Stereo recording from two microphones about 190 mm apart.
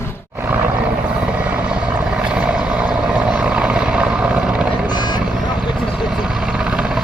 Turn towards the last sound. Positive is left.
turn(degrees=-5)  # may be behind; listen again after turning